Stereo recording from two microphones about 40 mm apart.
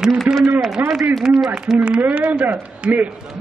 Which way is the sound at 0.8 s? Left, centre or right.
Right.